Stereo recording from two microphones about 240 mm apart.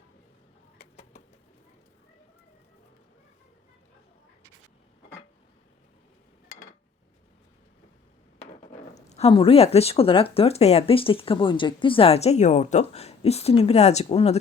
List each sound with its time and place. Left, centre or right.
0.8 s bird: left
9.0 s speech: left